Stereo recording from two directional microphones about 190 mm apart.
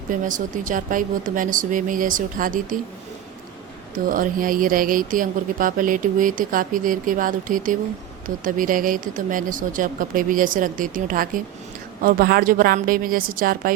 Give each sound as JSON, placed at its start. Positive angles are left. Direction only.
{"t": 0.1, "sound": "speech", "side_deg": -45}
{"t": 4.1, "sound": "speech", "side_deg": -45}